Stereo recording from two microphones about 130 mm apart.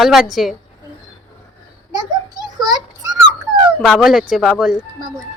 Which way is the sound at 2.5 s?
30° right (ahead or behind).